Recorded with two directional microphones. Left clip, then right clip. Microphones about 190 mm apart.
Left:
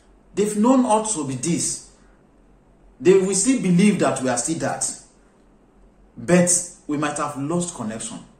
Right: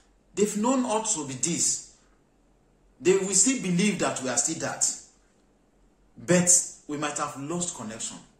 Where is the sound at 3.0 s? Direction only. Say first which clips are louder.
Left 6 dB; 10° right (ahead or behind).